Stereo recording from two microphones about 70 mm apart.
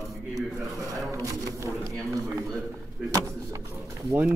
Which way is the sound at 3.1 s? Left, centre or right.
Right.